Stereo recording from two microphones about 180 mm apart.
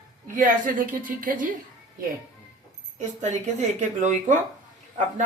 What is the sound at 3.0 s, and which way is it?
Speech, 40° right (ahead or behind).